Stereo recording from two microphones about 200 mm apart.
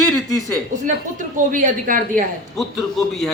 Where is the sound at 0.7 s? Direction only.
40° right (ahead or behind).